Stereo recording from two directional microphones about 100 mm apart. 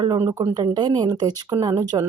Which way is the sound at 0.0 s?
55° right (ahead or behind).